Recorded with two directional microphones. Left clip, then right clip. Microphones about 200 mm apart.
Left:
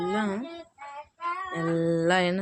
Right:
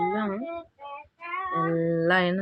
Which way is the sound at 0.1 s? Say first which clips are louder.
Even; 10° left (ahead or behind).